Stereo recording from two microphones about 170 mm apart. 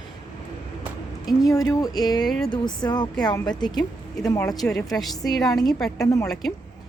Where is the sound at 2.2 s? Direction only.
5° left (ahead or behind).